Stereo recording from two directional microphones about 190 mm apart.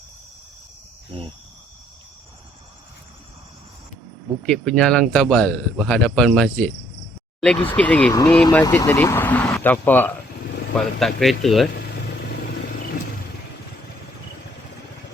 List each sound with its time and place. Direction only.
4.4 s speech: 5° left (ahead or behind)
11.7 s vehicle: 60° left (ahead or behind)